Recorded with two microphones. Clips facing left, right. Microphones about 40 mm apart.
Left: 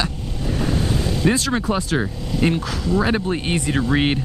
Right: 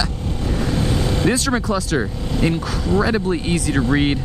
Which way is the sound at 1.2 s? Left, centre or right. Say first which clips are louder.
Even; centre.